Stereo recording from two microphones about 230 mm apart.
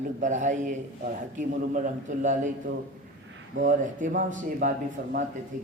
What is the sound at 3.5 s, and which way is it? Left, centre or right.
A man's voice, right.